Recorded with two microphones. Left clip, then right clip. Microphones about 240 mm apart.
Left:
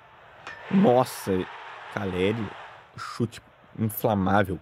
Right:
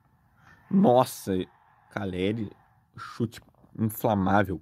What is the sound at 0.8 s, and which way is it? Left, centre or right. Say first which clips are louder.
Speech: even; centre.